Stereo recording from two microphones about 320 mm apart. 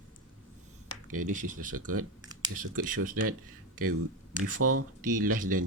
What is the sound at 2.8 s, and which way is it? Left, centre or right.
Speech, right.